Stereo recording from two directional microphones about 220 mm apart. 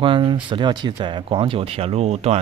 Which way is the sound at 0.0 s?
25° right (ahead or behind).